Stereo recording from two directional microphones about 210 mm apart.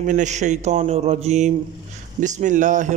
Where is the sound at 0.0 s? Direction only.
35° right (ahead or behind).